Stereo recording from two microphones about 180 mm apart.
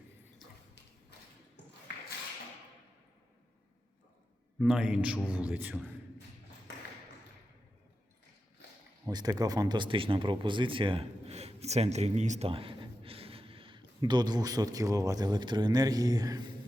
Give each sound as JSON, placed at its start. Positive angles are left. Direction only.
{"t": 4.6, "sound": "a man's voice", "side_deg": -5}
{"t": 9.0, "sound": "speech", "side_deg": -20}